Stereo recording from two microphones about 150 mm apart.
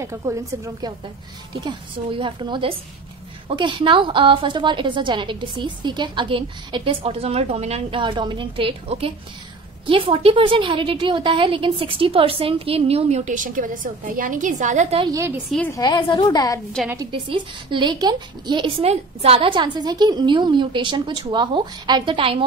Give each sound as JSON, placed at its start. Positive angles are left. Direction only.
{"t": 0.0, "sound": "a woman's voice", "side_deg": -20}
{"t": 1.5, "sound": "a woman's voice", "side_deg": -30}
{"t": 15.0, "sound": "a woman's voice", "side_deg": -25}
{"t": 15.7, "sound": "a woman's voice", "side_deg": 25}
{"t": 17.1, "sound": "a woman's voice", "side_deg": -35}